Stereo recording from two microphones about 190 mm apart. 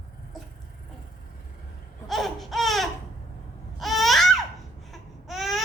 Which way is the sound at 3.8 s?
Centre (ahead or behind).